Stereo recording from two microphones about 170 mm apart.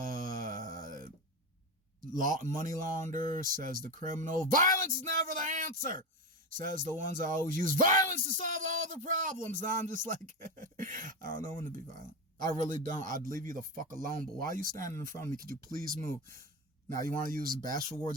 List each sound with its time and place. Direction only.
0.0 s mantra: 55° right (ahead or behind)
2.1 s speech: 50° right (ahead or behind)
12.5 s speech: 50° right (ahead or behind)
16.9 s a man's voice: 20° left (ahead or behind)
17.2 s speech: 55° right (ahead or behind)